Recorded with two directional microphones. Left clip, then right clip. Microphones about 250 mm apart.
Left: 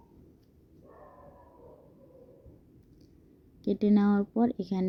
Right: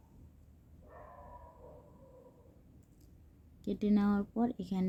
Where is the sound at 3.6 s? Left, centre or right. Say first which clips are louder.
Left 7 dB; centre.